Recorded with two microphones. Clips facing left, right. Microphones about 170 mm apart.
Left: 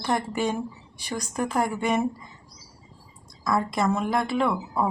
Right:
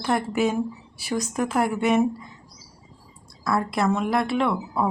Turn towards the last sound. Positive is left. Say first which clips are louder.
# right 1 dB
turn(degrees=0)  # may be behind; listen again after turning